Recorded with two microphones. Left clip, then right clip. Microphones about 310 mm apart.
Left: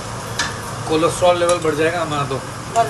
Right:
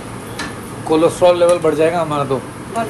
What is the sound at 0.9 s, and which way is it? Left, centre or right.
Speech, centre.